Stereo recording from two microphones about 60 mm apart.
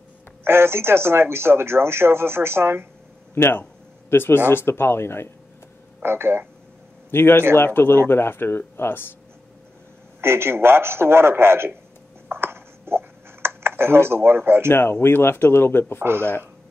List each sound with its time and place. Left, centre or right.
0.4 s speech: right
3.3 s speech: left
6.0 s speech: right
7.1 s speech: left
10.2 s speech: right
12.3 s a sound: right
14.7 s speech: left
16.0 s speech: right